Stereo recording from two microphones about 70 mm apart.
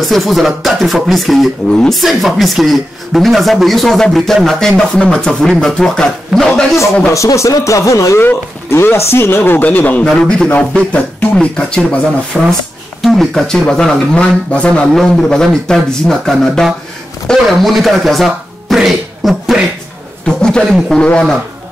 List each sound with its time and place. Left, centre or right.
0.0 s speech: centre
1.7 s speech: centre
2.0 s speech: centre
7.1 s speech: left
8.2 s speech: left
10.2 s speech: centre
12.3 s speech: centre
20.2 s speech: centre